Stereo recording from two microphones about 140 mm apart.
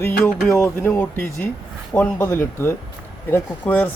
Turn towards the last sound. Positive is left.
turn(degrees=15)  # may be behind; listen again after turning